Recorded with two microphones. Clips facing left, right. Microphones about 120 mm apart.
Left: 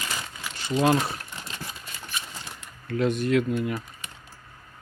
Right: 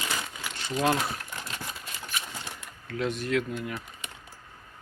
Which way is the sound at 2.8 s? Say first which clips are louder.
Left 6 dB; centre (ahead or behind).